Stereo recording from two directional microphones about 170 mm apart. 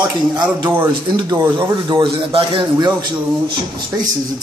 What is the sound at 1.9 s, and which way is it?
A man's voice, 30° right (ahead or behind).